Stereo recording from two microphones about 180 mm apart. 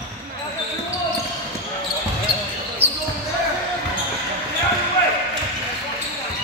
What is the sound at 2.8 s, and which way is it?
Basketball bounce, 35° right (ahead or behind).